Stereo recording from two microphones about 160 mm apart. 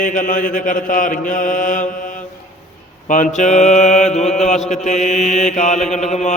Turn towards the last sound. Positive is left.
turn(degrees=45)  # may be behind; listen again after turning